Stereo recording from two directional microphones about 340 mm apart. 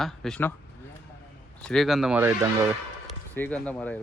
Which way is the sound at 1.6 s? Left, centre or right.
Centre.